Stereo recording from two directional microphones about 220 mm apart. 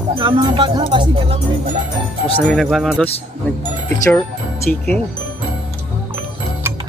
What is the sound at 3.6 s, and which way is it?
Speech, 15° left (ahead or behind).